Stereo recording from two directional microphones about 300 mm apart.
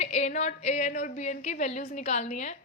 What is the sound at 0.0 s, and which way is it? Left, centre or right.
A woman's voice, left.